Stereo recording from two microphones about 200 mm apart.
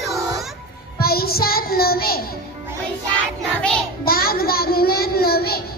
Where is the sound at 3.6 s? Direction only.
5° left (ahead or behind).